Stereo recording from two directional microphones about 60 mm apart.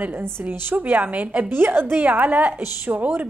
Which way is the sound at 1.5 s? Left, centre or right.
Right.